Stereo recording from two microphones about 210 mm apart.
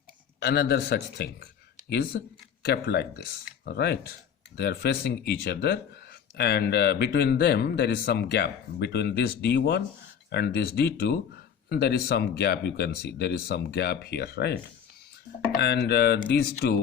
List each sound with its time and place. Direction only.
0.3 s a man's voice: 50° left (ahead or behind)